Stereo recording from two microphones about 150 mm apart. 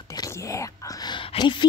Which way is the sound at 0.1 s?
25° left (ahead or behind).